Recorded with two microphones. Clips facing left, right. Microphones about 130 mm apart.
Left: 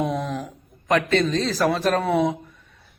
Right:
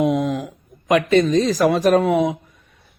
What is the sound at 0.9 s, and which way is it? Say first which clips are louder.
Speech: right 5 dB; 15° right (ahead or behind).